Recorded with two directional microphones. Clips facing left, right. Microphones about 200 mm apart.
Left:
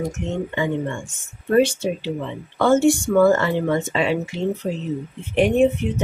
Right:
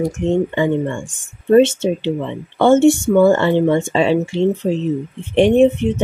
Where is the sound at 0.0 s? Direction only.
30° right (ahead or behind).